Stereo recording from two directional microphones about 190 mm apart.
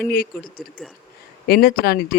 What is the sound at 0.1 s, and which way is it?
Speech, 50° left (ahead or behind).